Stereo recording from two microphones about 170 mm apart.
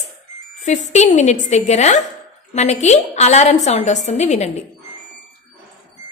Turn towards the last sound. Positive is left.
turn(degrees=40)  # may be behind; listen again after turning